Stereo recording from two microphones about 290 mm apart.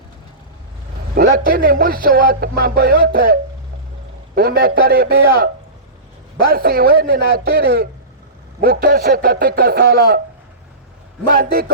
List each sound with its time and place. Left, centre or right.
1.1 s a man's voice: right
4.4 s a man's voice: right
6.5 s a man's voice: right
11.3 s a man's voice: right